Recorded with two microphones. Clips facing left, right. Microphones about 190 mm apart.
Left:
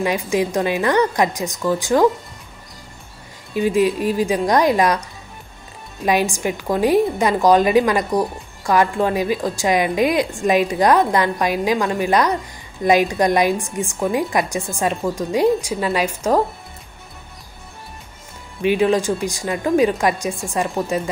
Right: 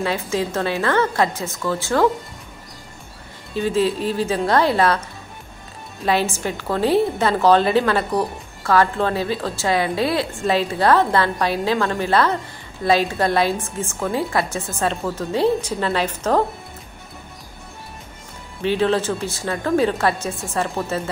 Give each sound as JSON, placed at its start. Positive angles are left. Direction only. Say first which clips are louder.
{"t": 0.0, "sound": "a woman's voice", "louder": "left 3 dB", "side_deg": 15}
{"t": 3.5, "sound": "a woman's voice", "louder": "left 3 dB", "side_deg": 15}
{"t": 6.0, "sound": "a woman's voice", "louder": "left 2 dB", "side_deg": 15}
{"t": 18.6, "sound": "a woman's voice", "louder": "left 2 dB", "side_deg": 15}